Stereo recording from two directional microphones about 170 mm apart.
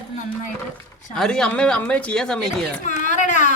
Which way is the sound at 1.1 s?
5° left (ahead or behind).